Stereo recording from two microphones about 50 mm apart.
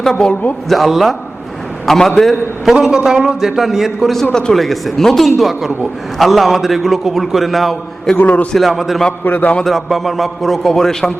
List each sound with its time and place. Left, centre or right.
0.0 s a man's voice: centre
2.8 s a man's voice: centre
4.1 s a man's voice: centre
4.5 s a man's voice: centre
8.1 s a man's voice: left
8.5 s a man's voice: centre
9.2 s a man's voice: left
9.6 s a man's voice: centre